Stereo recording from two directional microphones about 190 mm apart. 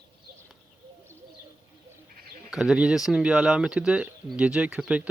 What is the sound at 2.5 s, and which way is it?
Speech, 5° right (ahead or behind).